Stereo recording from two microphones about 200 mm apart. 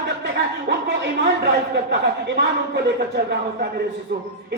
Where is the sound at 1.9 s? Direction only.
60° right (ahead or behind).